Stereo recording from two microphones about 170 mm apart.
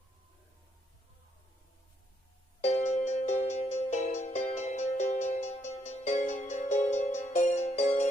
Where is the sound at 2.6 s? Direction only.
45° left (ahead or behind).